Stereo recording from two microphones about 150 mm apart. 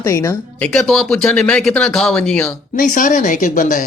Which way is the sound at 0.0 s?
20° left (ahead or behind).